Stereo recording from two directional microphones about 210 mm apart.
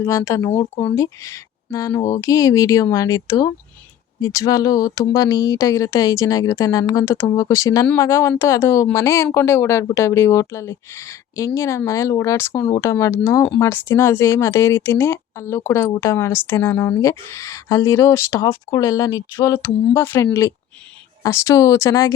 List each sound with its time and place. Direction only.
0.0 s speech: 15° left (ahead or behind)
21.2 s speech: 15° left (ahead or behind)